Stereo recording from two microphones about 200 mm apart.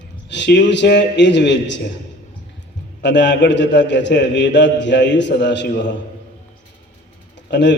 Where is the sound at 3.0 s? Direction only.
60° left (ahead or behind).